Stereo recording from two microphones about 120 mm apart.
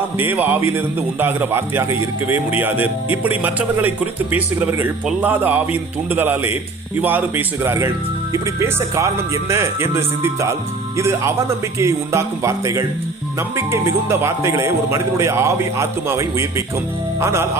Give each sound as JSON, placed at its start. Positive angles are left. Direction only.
{"t": 0.2, "sound": "a man's voice", "side_deg": -15}